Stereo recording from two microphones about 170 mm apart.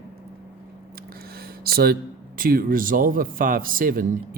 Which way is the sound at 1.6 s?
65° right (ahead or behind).